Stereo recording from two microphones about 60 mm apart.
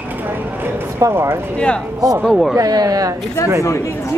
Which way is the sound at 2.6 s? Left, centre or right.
Right.